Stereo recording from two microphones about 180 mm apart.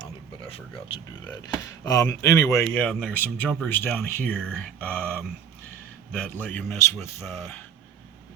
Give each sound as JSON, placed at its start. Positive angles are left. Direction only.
{"t": 1.8, "sound": "speech", "side_deg": 20}
{"t": 2.7, "sound": "speech", "side_deg": 5}